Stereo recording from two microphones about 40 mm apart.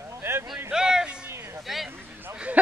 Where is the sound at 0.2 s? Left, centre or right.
Right.